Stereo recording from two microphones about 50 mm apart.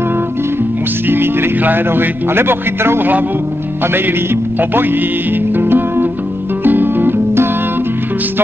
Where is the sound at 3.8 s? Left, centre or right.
Right.